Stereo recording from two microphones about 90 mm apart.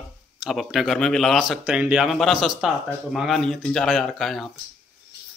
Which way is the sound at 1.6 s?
15° right (ahead or behind).